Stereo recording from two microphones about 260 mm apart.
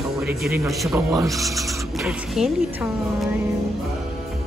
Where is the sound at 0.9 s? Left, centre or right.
Centre.